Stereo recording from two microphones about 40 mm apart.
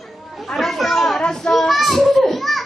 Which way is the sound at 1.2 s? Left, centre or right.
Centre.